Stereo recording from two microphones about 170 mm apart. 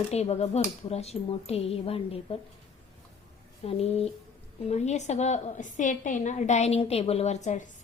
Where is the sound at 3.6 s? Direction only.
35° left (ahead or behind).